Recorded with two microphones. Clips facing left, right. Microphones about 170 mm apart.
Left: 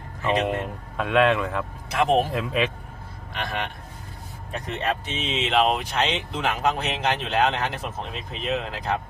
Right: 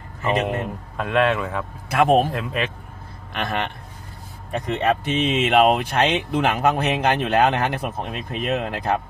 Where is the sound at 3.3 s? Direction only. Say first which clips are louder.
Right 4 dB; 60° right (ahead or behind).